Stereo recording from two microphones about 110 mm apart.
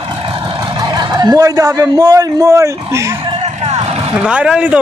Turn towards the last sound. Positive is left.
turn(degrees=-10)  # may be behind; listen again after turning